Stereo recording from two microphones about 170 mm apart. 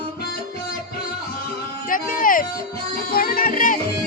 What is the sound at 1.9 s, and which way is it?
Music, 55° left (ahead or behind).